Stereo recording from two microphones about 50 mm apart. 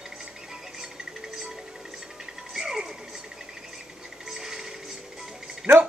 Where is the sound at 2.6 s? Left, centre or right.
Centre.